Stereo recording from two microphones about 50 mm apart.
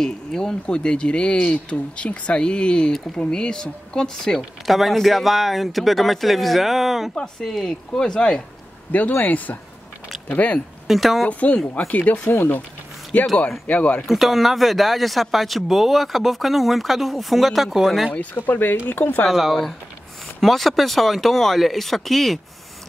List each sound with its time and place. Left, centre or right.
0.0 s speech: centre
4.4 s speech: centre
7.2 s speech: centre
9.2 s speech: left
10.9 s speech: centre
11.2 s speech: left
13.1 s speech: left
14.0 s speech: centre
18.3 s speech: left
19.2 s speech: centre